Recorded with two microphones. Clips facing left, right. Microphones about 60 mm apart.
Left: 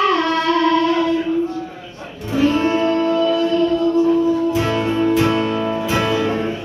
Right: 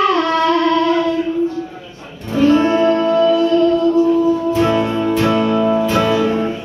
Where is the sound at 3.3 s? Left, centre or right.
Right.